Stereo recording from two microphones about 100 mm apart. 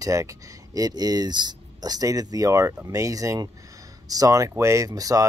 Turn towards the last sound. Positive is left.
turn(degrees=-35)  # may be behind; listen again after turning